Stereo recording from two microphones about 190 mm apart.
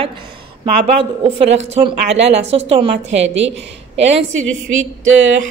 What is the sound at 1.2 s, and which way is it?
A woman's voice, 30° right (ahead or behind).